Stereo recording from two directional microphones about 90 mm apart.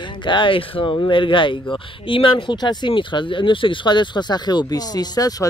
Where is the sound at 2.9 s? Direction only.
65° left (ahead or behind).